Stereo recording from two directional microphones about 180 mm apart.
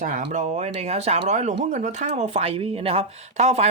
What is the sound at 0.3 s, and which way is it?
Speech, 40° right (ahead or behind).